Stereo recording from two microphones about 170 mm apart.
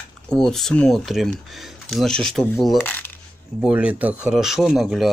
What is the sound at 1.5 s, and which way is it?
Coin, centre (ahead or behind).